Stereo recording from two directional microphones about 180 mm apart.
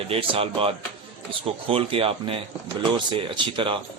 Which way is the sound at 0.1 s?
30° right (ahead or behind).